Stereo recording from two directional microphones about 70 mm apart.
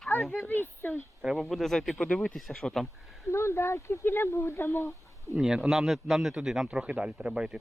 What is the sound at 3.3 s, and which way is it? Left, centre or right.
Speech, left.